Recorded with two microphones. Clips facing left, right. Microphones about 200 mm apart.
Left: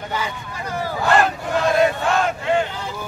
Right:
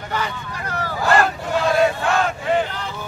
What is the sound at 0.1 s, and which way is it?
Vehicle, 10° left (ahead or behind).